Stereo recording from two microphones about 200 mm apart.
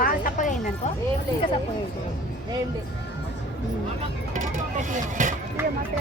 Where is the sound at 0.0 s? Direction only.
45° left (ahead or behind).